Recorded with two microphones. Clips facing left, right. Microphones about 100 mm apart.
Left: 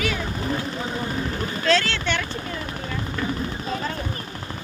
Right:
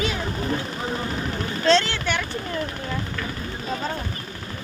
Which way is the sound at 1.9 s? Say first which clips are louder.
Even; 10° right (ahead or behind).